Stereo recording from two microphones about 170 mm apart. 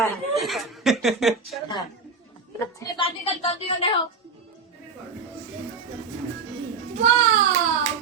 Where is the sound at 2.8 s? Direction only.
30° left (ahead or behind).